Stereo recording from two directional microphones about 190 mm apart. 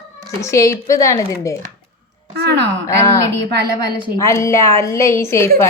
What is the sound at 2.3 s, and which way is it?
Speech, 60° right (ahead or behind).